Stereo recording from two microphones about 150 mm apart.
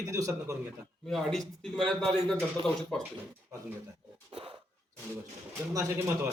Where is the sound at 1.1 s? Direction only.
5° left (ahead or behind).